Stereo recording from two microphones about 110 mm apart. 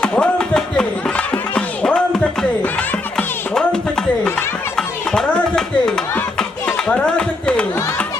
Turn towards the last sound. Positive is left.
turn(degrees=10)  # may be behind; listen again after turning